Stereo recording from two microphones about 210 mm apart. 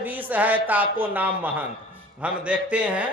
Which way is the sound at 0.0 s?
10° right (ahead or behind).